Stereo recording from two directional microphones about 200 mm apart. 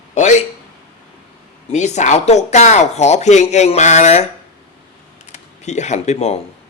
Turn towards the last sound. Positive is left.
turn(degrees=30)  # may be behind; listen again after turning